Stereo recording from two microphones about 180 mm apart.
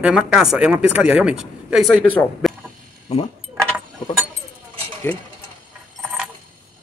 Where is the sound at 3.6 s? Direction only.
Centre (ahead or behind).